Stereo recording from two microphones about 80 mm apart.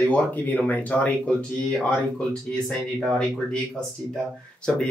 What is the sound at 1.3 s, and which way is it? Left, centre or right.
Speech, centre.